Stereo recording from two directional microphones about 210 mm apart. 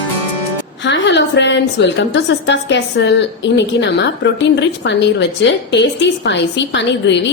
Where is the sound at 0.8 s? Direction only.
55° left (ahead or behind).